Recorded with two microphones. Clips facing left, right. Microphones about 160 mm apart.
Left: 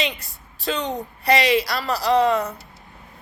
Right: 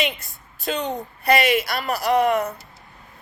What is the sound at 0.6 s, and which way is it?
A woman's voice, 35° left (ahead or behind).